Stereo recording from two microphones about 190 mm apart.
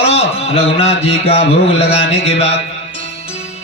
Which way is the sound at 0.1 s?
35° left (ahead or behind).